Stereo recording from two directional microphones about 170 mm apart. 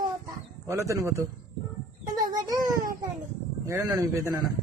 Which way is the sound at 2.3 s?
20° right (ahead or behind).